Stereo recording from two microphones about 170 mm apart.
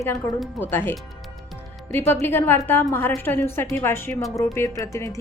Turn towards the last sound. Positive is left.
turn(degrees=15)  # may be behind; listen again after turning